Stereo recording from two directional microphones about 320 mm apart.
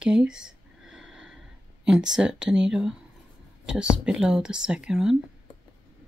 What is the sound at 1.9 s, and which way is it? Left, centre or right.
Speech, centre.